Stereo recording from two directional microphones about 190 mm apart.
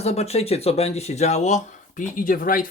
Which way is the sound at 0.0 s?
35° left (ahead or behind).